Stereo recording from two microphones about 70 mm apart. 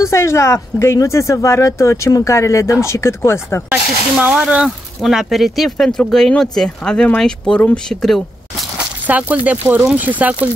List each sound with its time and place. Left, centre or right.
0.0 s speech: left
4.4 s speech: centre
4.6 s speech: centre
8.7 s speech: right